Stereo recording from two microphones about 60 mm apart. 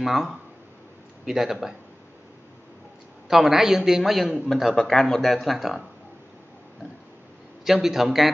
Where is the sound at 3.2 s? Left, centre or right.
Centre.